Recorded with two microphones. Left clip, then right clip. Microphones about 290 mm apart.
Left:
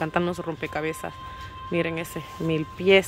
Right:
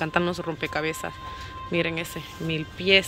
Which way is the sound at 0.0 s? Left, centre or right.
Centre.